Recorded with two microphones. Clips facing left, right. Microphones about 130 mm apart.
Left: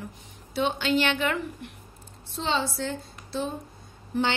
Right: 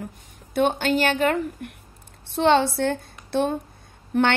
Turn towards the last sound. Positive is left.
turn(degrees=-65)  # may be behind; listen again after turning